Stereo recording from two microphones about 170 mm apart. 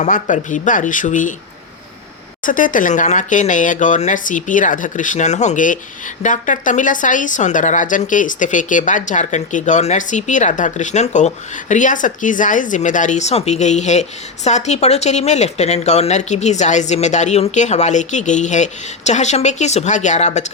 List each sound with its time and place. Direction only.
0.0 s a woman's voice: 50° left (ahead or behind)
2.4 s a woman's voice: 50° left (ahead or behind)